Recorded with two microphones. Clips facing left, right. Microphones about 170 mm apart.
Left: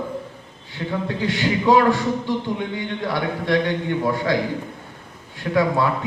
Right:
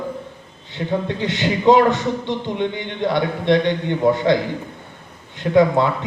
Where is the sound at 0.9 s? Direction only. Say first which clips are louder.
Right 2 dB; 25° right (ahead or behind).